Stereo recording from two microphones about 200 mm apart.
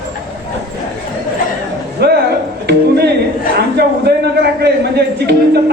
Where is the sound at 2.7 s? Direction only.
55° right (ahead or behind).